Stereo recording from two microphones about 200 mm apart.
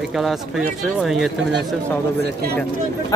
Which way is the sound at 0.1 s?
Centre (ahead or behind).